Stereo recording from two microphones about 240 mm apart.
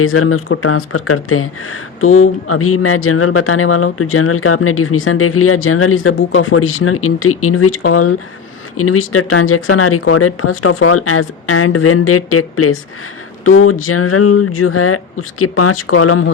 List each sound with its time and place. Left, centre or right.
0.0 s speech: left